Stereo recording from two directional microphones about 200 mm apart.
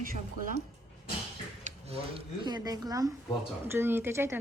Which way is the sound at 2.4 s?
20° right (ahead or behind).